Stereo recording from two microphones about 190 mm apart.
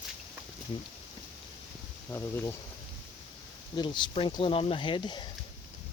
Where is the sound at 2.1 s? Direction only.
10° left (ahead or behind).